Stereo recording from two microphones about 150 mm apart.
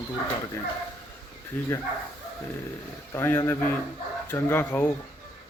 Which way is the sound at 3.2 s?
15° left (ahead or behind).